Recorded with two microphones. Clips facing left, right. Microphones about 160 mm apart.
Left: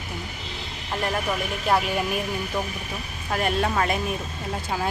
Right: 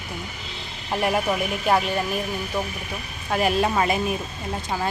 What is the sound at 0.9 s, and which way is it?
Speech, 10° right (ahead or behind).